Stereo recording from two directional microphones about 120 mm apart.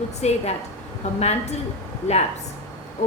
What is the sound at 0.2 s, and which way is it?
A woman's voice, 65° left (ahead or behind).